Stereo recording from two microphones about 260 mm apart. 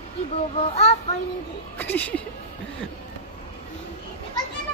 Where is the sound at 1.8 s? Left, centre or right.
Centre.